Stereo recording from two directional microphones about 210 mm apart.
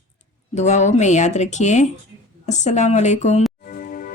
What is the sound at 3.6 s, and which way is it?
Music, 40° left (ahead or behind).